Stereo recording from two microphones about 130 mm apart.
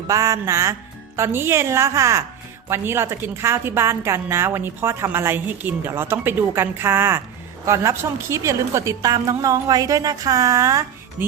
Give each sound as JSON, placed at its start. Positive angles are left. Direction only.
{"t": 0.1, "sound": "a woman's voice", "side_deg": -25}